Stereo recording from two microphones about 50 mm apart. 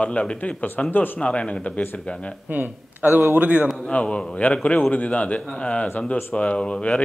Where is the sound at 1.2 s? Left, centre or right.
Left.